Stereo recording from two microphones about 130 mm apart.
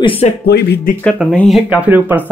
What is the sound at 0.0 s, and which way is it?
Speech, 45° left (ahead or behind).